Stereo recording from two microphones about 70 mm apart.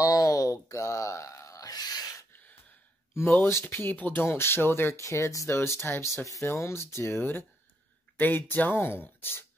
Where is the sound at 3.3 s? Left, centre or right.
Left.